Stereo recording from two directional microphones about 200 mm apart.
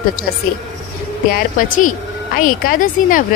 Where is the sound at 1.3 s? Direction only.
40° left (ahead or behind).